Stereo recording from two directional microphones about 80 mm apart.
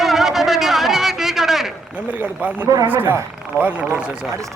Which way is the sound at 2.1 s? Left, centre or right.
Right.